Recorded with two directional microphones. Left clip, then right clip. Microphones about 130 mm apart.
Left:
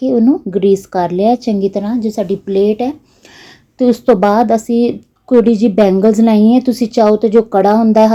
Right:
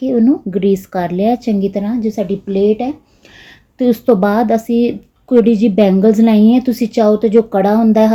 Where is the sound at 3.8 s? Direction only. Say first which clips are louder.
Left 2 dB; 15° left (ahead or behind).